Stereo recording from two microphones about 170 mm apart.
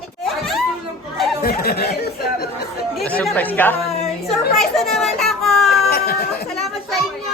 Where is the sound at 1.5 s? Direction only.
65° left (ahead or behind).